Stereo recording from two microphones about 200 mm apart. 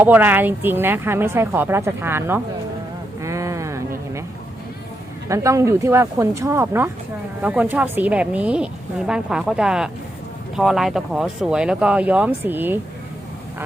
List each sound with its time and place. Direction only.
0.0 s speech: 10° right (ahead or behind)
3.2 s a sound: 15° right (ahead or behind)
5.3 s speech: 15° right (ahead or behind)